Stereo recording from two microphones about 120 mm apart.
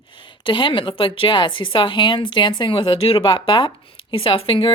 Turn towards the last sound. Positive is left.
turn(degrees=45)  # may be behind; listen again after turning